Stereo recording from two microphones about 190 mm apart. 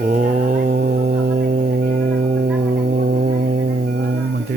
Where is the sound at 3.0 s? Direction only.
50° right (ahead or behind).